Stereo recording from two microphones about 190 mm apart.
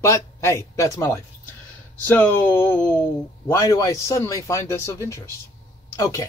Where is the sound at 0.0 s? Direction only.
15° left (ahead or behind).